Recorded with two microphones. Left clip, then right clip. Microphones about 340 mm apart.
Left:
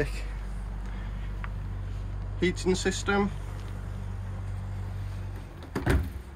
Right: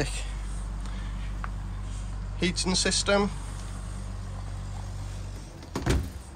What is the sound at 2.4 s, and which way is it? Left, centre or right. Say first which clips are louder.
Speech: even; centre.